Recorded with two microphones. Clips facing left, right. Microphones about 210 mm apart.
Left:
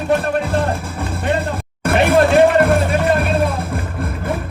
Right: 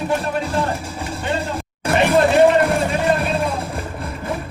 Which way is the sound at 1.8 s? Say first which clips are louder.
Left 2 dB; 55° left (ahead or behind).